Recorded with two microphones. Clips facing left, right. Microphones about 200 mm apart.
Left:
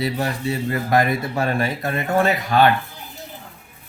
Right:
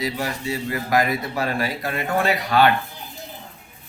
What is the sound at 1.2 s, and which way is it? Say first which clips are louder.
Speech: left 2 dB; 50° left (ahead or behind).